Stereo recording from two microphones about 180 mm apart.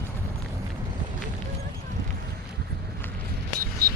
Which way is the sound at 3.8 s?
55° right (ahead or behind).